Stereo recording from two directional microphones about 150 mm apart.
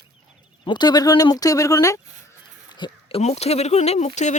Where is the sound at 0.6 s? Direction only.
30° left (ahead or behind).